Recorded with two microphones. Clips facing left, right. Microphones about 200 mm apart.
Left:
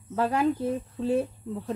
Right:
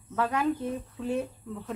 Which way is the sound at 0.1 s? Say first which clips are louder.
Left 3 dB; 30° left (ahead or behind).